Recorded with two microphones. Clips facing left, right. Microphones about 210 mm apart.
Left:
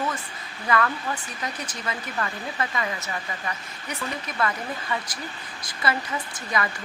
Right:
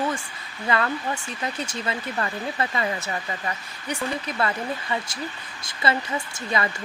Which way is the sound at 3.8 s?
30° right (ahead or behind).